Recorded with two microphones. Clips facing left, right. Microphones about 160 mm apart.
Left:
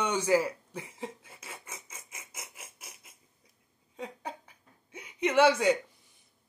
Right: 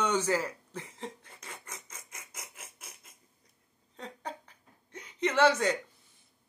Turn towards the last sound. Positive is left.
turn(degrees=10)  # may be behind; listen again after turning